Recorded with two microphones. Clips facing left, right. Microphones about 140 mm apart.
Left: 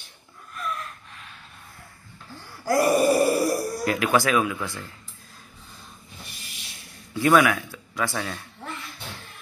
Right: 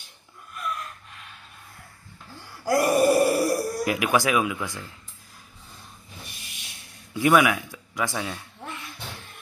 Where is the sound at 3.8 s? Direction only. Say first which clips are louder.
Left 2 dB; 15° right (ahead or behind).